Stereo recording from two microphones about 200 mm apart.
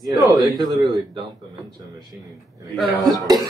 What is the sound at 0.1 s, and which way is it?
Speech, 15° right (ahead or behind).